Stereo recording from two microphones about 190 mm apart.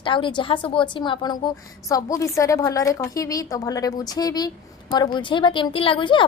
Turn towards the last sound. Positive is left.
turn(degrees=25)  # may be behind; listen again after turning